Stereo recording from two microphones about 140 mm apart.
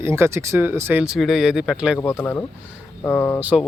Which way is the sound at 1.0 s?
5° right (ahead or behind).